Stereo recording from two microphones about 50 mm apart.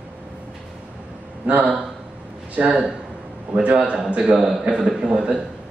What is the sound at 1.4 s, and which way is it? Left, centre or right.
A man's voice, right.